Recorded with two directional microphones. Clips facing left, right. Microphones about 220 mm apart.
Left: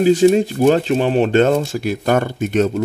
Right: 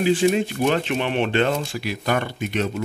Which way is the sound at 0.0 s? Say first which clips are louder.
Left 7 dB; 40° left (ahead or behind).